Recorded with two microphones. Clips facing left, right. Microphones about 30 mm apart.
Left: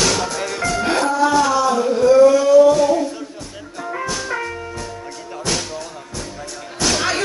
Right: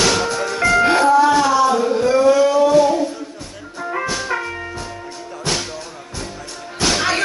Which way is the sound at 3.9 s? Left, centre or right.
Centre.